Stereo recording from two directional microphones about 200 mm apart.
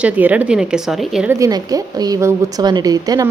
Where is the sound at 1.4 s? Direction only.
15° right (ahead or behind).